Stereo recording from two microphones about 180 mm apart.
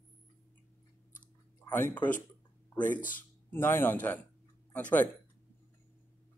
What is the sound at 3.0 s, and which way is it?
Speech, 50° left (ahead or behind).